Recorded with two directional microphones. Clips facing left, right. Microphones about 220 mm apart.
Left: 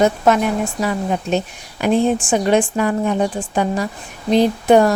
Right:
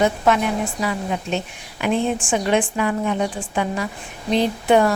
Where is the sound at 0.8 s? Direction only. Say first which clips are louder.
Left 4 dB; 40° left (ahead or behind).